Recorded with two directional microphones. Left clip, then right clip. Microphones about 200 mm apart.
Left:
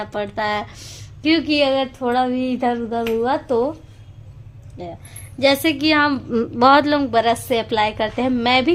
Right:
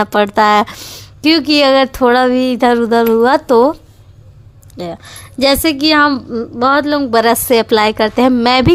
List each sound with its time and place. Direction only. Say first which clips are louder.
0.0 s speech: right 12 dB; 35° right (ahead or behind)
2.1 s speech: right 8 dB; 35° right (ahead or behind)
4.8 s a woman's voice: right 9 dB; 40° right (ahead or behind); by 6.2 s 20° right (ahead or behind)
6.3 s speech: right 1 dB; 5° right (ahead or behind)
7.1 s speech: right 7 dB; 35° right (ahead or behind)